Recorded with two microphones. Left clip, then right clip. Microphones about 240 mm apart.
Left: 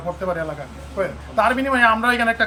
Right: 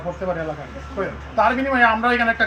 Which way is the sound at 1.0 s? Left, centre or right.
Centre.